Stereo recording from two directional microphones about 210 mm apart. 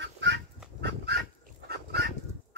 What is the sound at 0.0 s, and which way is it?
Goose, 55° right (ahead or behind).